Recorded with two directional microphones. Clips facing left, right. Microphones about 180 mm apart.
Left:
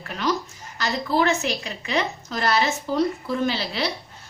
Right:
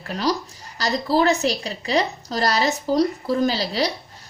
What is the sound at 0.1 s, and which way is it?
A woman's voice, 35° right (ahead or behind).